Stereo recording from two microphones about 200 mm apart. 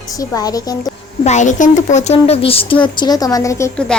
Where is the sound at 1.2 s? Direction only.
35° left (ahead or behind); by 3.8 s 15° left (ahead or behind).